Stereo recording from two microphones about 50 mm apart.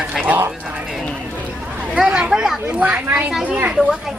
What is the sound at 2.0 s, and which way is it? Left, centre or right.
Speech, centre.